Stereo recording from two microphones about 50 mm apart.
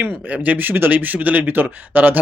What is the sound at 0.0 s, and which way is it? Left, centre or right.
Speech, right.